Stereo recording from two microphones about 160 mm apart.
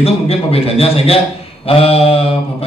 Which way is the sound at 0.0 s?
35° left (ahead or behind).